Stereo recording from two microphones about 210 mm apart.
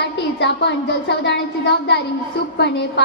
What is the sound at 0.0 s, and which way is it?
A woman's voice, 55° left (ahead or behind).